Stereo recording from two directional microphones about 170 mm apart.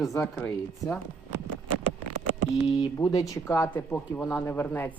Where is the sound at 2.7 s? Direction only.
20° left (ahead or behind).